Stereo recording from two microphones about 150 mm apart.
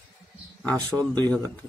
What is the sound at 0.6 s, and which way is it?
Speech, 10° left (ahead or behind).